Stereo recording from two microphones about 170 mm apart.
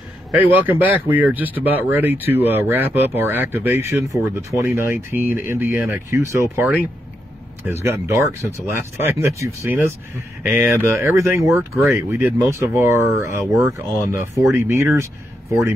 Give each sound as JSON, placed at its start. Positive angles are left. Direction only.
{"t": 0.4, "sound": "speech", "side_deg": -10}